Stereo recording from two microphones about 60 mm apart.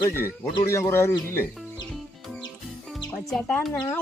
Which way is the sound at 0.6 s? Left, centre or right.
Left.